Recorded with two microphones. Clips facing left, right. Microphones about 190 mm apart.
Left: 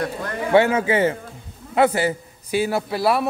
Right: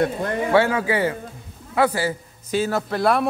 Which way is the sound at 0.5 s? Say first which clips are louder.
Left 3 dB; 20° left (ahead or behind).